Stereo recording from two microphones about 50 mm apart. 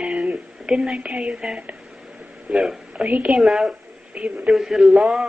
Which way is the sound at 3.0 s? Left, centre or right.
Right.